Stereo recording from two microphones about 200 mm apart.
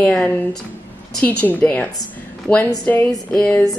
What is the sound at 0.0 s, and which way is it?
Speech, 5° left (ahead or behind).